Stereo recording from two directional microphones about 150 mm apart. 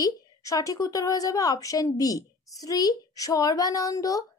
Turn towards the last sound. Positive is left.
turn(degrees=25)  # may be behind; listen again after turning